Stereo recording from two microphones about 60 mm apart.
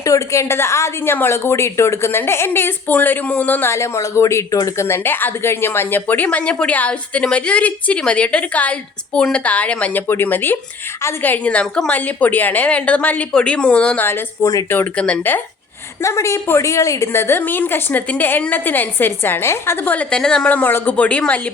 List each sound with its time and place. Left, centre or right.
0.0 s a woman's voice: left
3.7 s a woman's voice: left
6.2 s a woman's voice: left
10.1 s a woman's voice: left
11.6 s a woman's voice: centre
11.9 s a woman's voice: left
14.4 s a woman's voice: left
14.9 s a woman's voice: left
16.0 s a woman's voice: left
17.1 s a woman's voice: left
20.1 s a woman's voice: centre
20.5 s a woman's voice: left